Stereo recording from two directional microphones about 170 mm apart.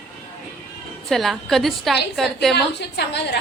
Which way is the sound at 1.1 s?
Centre (ahead or behind).